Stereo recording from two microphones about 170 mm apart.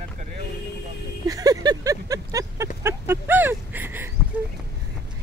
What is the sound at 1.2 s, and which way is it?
Speech, 20° right (ahead or behind).